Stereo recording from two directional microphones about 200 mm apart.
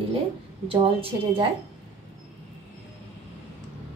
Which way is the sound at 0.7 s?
25° right (ahead or behind).